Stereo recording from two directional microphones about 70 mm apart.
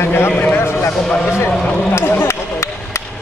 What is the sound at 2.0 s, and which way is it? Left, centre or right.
Speech, left.